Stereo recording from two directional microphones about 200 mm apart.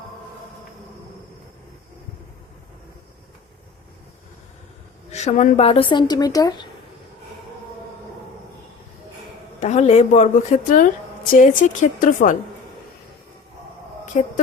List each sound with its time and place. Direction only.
5.1 s speech: 35° left (ahead or behind); by 6.7 s 20° left (ahead or behind)
9.6 s a woman's voice: 35° left (ahead or behind)
14.1 s a woman's voice: 35° left (ahead or behind)